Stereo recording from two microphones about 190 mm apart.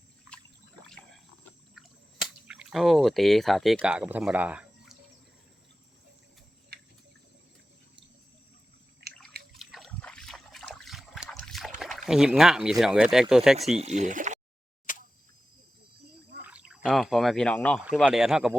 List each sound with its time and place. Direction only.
2.2 s speech: 5° right (ahead or behind)
6.7 s cricket: 55° right (ahead or behind)
9.0 s drip: 55° right (ahead or behind)
9.6 s trickle: centre (ahead or behind)
11.8 s speech: centre (ahead or behind)
13.7 s speech: 35° right (ahead or behind)
14.9 s a sound: 45° left (ahead or behind)
16.4 s speech: 5° right (ahead or behind)